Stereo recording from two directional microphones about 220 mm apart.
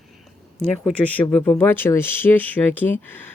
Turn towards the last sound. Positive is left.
turn(degrees=10)  # may be behind; listen again after turning